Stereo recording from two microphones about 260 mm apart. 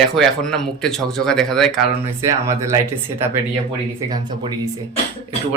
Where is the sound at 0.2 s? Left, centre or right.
Centre.